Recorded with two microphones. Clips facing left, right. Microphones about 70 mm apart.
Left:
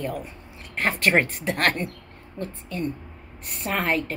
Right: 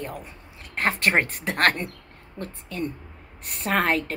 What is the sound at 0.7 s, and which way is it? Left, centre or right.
Speech, right.